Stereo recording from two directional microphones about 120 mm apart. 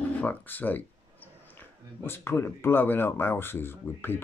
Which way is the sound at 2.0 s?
20° left (ahead or behind).